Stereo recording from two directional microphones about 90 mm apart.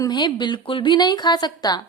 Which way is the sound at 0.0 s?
55° left (ahead or behind).